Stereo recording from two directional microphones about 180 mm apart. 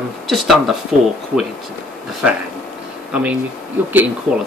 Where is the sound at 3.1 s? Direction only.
5° right (ahead or behind).